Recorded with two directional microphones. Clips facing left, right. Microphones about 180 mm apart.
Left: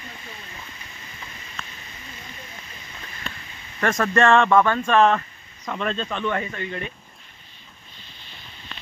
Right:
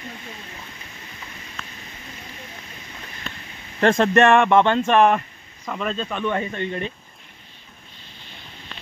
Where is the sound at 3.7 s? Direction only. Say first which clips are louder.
Right 4 dB; 30° right (ahead or behind).